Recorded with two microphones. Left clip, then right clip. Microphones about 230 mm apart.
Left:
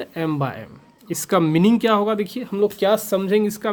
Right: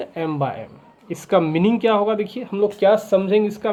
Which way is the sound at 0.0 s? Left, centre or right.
Left.